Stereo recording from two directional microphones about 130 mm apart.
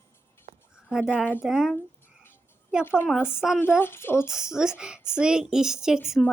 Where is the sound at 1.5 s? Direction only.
5° right (ahead or behind).